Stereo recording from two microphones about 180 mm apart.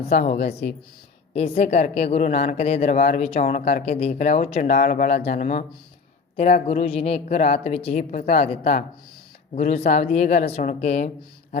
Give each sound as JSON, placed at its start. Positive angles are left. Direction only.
{"t": 0.1, "sound": "a woman's voice", "side_deg": 55}
{"t": 1.3, "sound": "a woman's voice", "side_deg": 35}
{"t": 4.7, "sound": "a woman's voice", "side_deg": 50}